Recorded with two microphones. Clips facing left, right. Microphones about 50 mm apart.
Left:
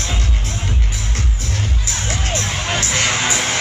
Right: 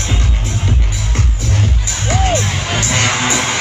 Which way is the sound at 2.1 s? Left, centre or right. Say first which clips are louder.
Right 8 dB; right.